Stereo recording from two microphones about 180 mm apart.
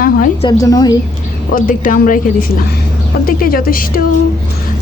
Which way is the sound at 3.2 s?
55° left (ahead or behind).